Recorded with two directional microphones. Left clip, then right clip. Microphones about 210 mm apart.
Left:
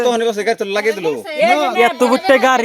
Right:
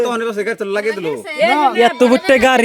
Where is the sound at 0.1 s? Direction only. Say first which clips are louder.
Left 3 dB; 20° right (ahead or behind).